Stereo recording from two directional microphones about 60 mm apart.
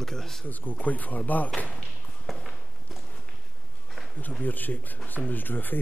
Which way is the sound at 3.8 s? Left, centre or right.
Centre.